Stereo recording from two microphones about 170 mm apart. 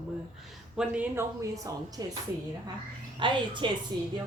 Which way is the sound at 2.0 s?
25° right (ahead or behind).